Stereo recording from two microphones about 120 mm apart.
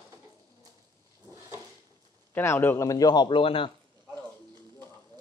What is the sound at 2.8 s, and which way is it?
Speech, 35° left (ahead or behind).